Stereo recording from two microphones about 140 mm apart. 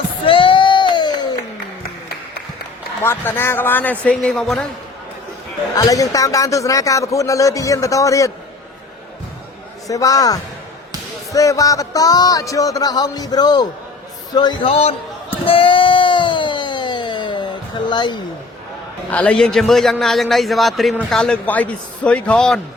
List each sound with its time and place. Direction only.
0.3 s a sound: 40° left (ahead or behind)
3.0 s speech: 15° left (ahead or behind)
5.7 s speech: 25° left (ahead or behind)
9.8 s a man's voice: 25° left (ahead or behind)
14.7 s a man's voice: 45° left (ahead or behind)
15.4 s a sound: 40° left (ahead or behind)
19.1 s a man's voice: 10° left (ahead or behind)